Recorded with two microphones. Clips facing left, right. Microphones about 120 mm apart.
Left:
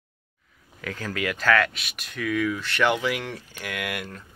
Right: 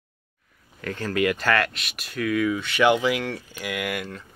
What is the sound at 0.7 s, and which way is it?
Speech, centre (ahead or behind).